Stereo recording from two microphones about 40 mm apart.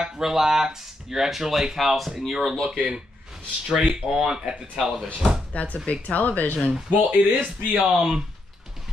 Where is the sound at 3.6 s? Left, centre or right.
Centre.